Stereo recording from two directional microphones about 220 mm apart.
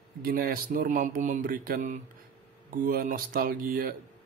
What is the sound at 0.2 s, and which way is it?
Speech, 40° right (ahead or behind).